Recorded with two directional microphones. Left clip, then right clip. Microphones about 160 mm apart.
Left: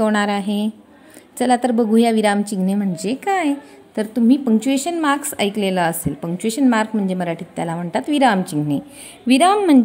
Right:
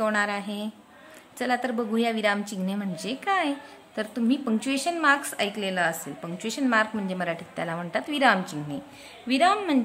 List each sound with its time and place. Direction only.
0.0 s a woman's voice: 35° left (ahead or behind)
9.3 s speech: 45° left (ahead or behind)